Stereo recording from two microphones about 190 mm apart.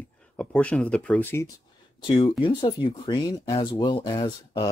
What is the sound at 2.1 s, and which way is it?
Speech, 25° left (ahead or behind).